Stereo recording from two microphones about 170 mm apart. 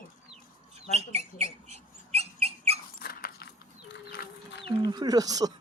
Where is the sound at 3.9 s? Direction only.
90° left.